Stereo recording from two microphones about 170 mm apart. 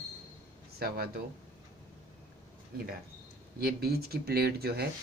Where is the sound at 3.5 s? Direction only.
65° right (ahead or behind).